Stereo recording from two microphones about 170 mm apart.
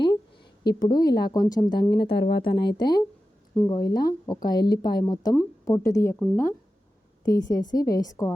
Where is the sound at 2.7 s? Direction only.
25° left (ahead or behind).